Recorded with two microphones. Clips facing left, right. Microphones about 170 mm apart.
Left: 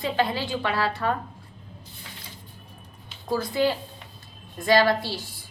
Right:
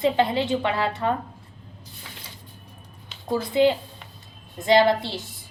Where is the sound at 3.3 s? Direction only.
20° right (ahead or behind).